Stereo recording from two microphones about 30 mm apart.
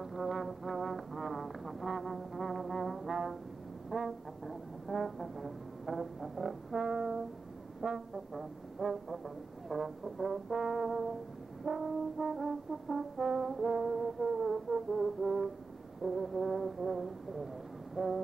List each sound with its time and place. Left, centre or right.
0.0 s brass instrument: centre
6.9 s music: centre
7.8 s brass instrument: centre
13.3 s music: centre
16.0 s brass instrument: centre